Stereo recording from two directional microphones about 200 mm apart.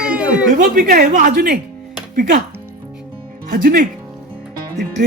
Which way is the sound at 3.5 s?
45° right (ahead or behind).